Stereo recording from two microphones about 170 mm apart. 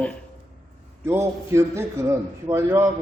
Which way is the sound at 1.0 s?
15° right (ahead or behind).